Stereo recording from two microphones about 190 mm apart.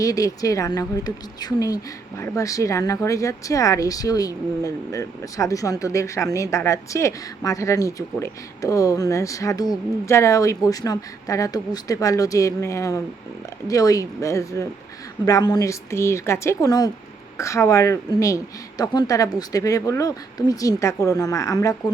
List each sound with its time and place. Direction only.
0.0 s speech: 15° left (ahead or behind)